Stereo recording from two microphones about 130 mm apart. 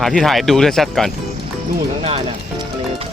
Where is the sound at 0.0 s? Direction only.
Centre (ahead or behind).